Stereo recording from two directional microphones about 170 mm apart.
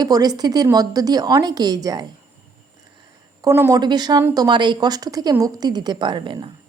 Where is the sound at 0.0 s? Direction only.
25° right (ahead or behind).